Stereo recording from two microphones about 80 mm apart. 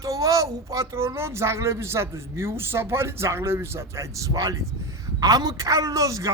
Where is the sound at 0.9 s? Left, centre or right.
Right.